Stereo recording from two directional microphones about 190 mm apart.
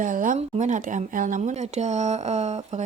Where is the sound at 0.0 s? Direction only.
45° right (ahead or behind).